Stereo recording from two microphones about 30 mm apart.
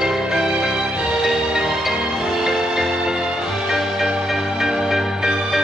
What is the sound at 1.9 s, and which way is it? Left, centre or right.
Music, right.